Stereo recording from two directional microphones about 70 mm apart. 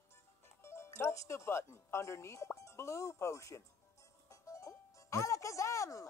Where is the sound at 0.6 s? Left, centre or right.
Left.